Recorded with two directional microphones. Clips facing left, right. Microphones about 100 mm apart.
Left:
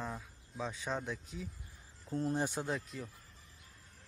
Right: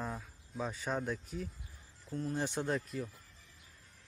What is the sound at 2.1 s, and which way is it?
Speech, 30° left (ahead or behind).